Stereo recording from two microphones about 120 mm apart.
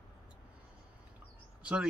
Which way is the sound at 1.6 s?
10° right (ahead or behind).